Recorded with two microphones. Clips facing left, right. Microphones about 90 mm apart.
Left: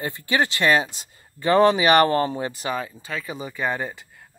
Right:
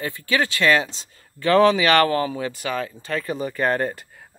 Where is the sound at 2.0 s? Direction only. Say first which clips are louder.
Left 1 dB; 30° left (ahead or behind).